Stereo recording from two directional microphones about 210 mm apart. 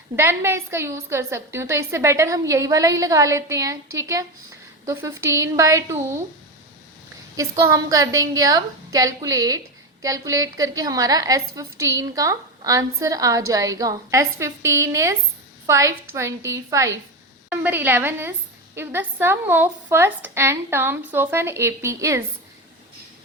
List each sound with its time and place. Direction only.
0.2 s a woman's voice: 10° right (ahead or behind)
7.3 s a woman's voice: 15° right (ahead or behind)